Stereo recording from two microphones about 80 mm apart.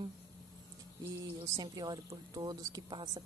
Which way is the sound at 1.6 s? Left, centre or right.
Right.